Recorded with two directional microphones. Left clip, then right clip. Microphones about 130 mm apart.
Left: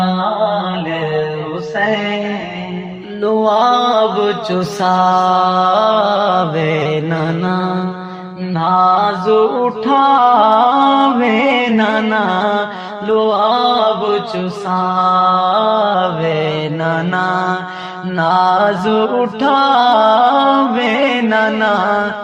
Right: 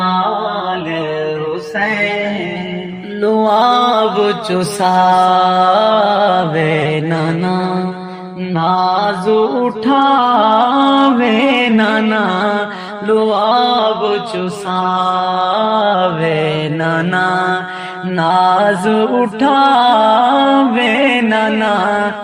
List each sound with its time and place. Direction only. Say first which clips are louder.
3.2 s mantra: right 1 dB; 35° right (ahead or behind)
8.5 s music: left 2 dB; 40° right (ahead or behind)
13.1 s mantra: even; 35° right (ahead or behind)
18.2 s music: right 1 dB; 30° right (ahead or behind)